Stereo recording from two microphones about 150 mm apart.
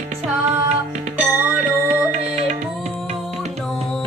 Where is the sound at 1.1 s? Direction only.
10° right (ahead or behind).